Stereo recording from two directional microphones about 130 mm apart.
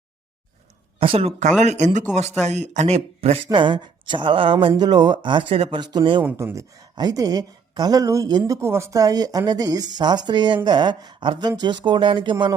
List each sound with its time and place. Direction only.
0.9 s speech: 45° right (ahead or behind)
1.6 s a woman's voice: 65° right (ahead or behind); by 5.7 s 45° right (ahead or behind)
5.7 s a woman's voice: 35° right (ahead or behind)
6.2 s a woman's voice: 20° right (ahead or behind); by 12.5 s 35° right (ahead or behind)